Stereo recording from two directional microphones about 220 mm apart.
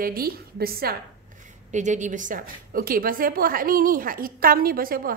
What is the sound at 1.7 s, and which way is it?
A woman's voice, 35° right (ahead or behind).